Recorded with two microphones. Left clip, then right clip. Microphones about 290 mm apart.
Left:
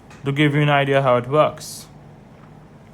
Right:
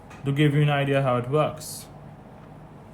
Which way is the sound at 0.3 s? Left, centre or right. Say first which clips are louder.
Left 6 dB; centre.